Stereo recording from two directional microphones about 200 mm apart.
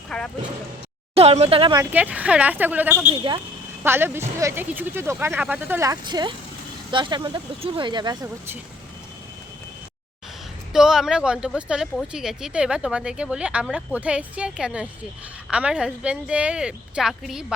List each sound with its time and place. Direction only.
0.1 s speech: 5° left (ahead or behind)
1.1 s speech: 30° right (ahead or behind)
1.8 s speech: 10° right (ahead or behind)
3.1 s speech: 25° right (ahead or behind)
3.8 s speech: 10° right (ahead or behind)
10.7 s speech: 5° right (ahead or behind)